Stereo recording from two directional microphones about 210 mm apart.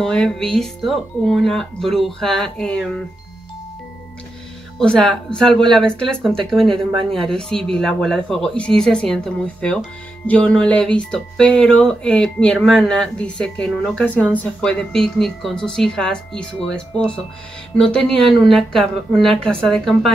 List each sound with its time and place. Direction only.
0.0 s speech: 5° left (ahead or behind)
4.7 s speech: centre (ahead or behind)